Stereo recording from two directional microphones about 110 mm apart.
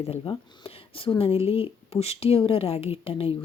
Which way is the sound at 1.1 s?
60° left (ahead or behind).